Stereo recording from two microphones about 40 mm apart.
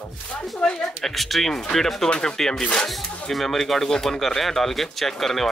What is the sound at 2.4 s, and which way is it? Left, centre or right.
Speech, centre.